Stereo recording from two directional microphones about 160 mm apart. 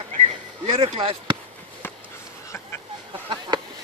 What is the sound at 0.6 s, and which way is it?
Speech, 35° right (ahead or behind).